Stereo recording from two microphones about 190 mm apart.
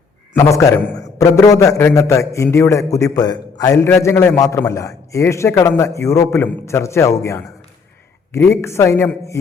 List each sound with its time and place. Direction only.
0.3 s a man's voice: 15° left (ahead or behind)